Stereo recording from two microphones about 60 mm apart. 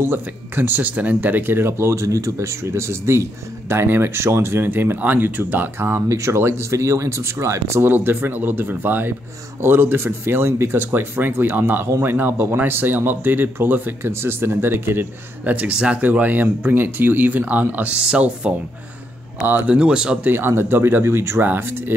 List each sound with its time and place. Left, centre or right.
0.0 s speech: right
2.0 s speech: right
6.0 s speech: right
7.8 s speech: right
14.1 s speech: right
15.5 s speech: right
19.7 s speech: centre
20.2 s speech: right
21.4 s speech: right